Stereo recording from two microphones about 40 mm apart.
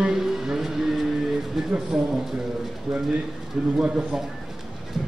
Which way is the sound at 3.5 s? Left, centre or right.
Centre.